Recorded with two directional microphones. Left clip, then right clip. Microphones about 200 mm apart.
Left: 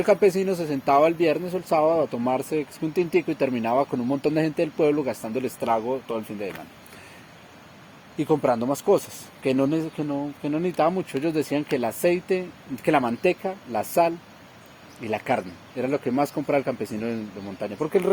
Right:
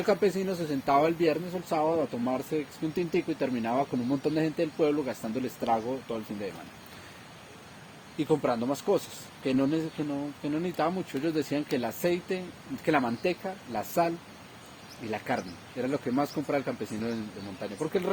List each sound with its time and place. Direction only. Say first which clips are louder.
0.0 s speech: left 7 dB; 55° left (ahead or behind)
8.2 s speech: left 5 dB; 50° left (ahead or behind)